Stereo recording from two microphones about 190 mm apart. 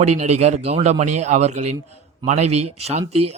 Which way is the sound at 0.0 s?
35° right (ahead or behind).